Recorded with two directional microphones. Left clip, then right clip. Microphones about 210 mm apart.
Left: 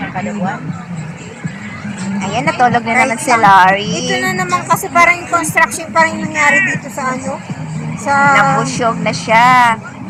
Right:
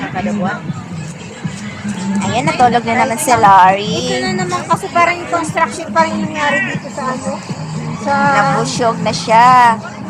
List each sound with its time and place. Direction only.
2.3 s speech: 10° left (ahead or behind)
3.8 s music: 5° right (ahead or behind)
4.1 s speech: 20° left (ahead or behind)
8.0 s speech: 20° left (ahead or behind)